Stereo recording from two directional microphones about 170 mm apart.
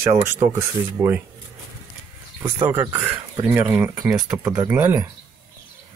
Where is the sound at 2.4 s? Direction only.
10° right (ahead or behind).